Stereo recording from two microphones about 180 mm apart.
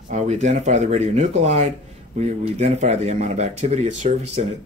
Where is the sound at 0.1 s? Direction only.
40° right (ahead or behind).